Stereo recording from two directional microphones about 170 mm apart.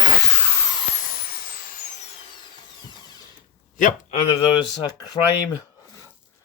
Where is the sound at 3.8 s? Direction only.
50° left (ahead or behind).